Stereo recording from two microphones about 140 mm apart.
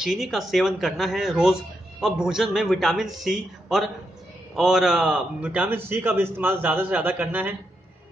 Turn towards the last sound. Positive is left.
turn(degrees=-10)  # may be behind; listen again after turning